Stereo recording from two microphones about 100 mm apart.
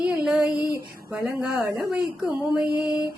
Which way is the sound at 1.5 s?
25° right (ahead or behind).